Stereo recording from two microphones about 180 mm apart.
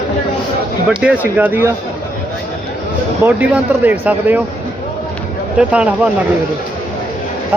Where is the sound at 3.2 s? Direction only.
10° right (ahead or behind).